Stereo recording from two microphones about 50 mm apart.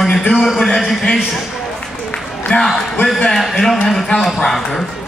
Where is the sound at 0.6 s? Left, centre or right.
Centre.